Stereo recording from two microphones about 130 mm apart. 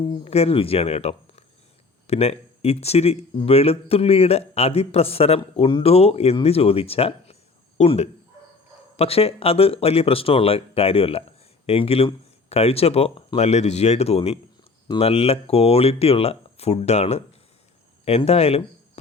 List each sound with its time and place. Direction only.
0.0 s speech: 45° left (ahead or behind)